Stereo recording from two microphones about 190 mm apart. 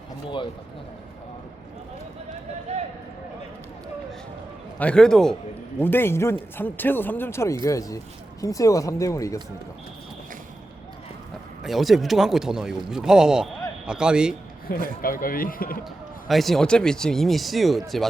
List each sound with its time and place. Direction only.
2.7 s a sound: 35° right (ahead or behind)
4.8 s speech: 5° left (ahead or behind)
11.6 s speech: centre (ahead or behind)
14.7 s a man's voice: 50° left (ahead or behind)
16.3 s speech: centre (ahead or behind)